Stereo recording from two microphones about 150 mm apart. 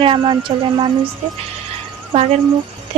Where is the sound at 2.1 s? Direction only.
40° right (ahead or behind).